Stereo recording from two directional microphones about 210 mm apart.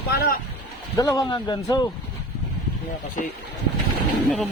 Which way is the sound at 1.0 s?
15° left (ahead or behind).